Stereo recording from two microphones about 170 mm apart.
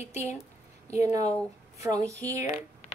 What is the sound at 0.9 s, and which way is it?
Speech, 20° right (ahead or behind).